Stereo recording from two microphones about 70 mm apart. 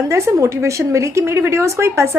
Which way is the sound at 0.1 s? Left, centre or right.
Right.